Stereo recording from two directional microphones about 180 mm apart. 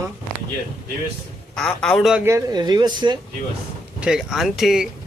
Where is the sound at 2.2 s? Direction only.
20° right (ahead or behind).